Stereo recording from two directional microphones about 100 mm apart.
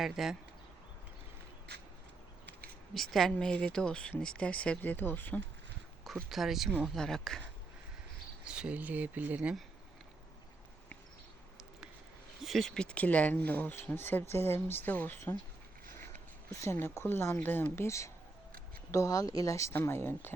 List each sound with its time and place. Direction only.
0.0 s speech: 5° right (ahead or behind)
2.9 s speech: centre (ahead or behind); by 5.4 s 20° left (ahead or behind)
6.1 s speech: centre (ahead or behind)
8.4 s speech: 10° right (ahead or behind)
12.4 s speech: centre (ahead or behind); by 15.2 s 20° left (ahead or behind)
16.5 s speech: 30° left (ahead or behind)